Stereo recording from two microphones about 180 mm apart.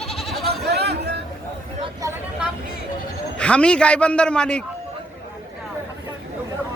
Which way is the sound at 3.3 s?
5° left (ahead or behind).